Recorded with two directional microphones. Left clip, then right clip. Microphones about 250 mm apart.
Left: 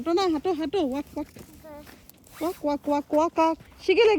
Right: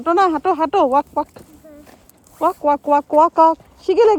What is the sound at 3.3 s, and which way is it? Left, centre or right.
Speech, centre.